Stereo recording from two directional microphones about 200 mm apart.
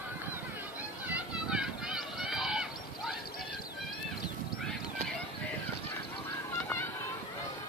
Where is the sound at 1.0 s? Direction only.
5° right (ahead or behind).